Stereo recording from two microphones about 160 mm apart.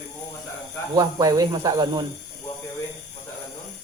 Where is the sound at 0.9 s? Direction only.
25° right (ahead or behind).